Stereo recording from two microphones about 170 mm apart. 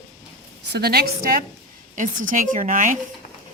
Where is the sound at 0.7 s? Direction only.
65° right (ahead or behind); by 3.0 s 50° right (ahead or behind).